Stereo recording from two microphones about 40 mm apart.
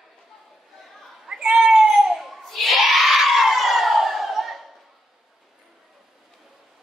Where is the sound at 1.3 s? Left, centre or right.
Centre.